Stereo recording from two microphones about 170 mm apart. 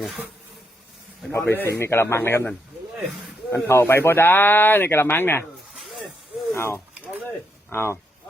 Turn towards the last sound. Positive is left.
turn(degrees=15)  # may be behind; listen again after turning